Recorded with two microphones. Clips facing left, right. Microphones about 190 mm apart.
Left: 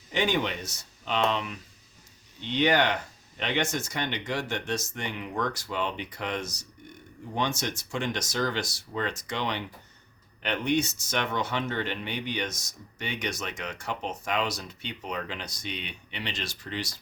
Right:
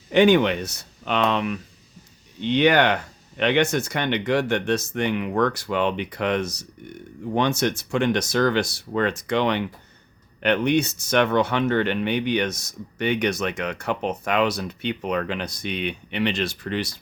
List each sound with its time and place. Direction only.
0.1 s speech: 65° right (ahead or behind)